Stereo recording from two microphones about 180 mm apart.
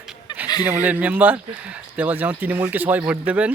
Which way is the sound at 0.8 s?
10° right (ahead or behind).